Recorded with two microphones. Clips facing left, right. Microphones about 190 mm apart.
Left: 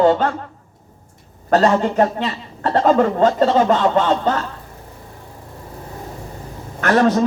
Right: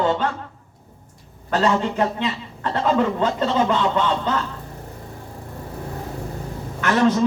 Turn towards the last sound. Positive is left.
turn(degrees=55)  # may be behind; listen again after turning